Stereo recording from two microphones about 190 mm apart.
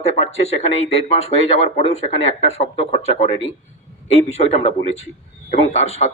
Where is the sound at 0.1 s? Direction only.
35° left (ahead or behind).